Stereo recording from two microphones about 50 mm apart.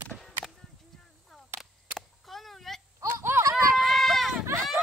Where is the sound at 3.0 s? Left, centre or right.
Right.